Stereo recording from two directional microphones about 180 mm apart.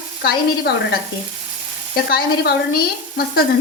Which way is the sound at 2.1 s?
60° left (ahead or behind).